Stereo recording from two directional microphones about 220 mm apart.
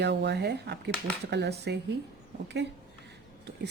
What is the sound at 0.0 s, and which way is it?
Speech, 50° right (ahead or behind).